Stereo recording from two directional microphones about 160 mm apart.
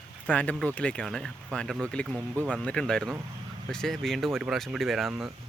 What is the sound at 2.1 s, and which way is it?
Speech, 15° right (ahead or behind).